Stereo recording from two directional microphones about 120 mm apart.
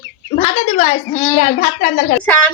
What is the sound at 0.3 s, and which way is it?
Speech, 55° left (ahead or behind).